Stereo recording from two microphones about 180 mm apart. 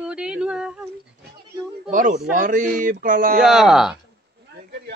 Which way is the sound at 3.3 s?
5° right (ahead or behind).